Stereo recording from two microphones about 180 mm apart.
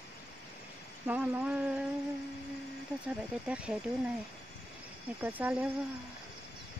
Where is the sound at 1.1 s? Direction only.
5° right (ahead or behind).